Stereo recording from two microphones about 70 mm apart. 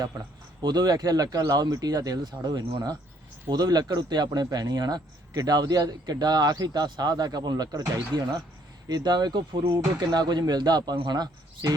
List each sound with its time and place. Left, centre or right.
0.6 s speech: right
4.5 s speech: right
5.3 s speech: right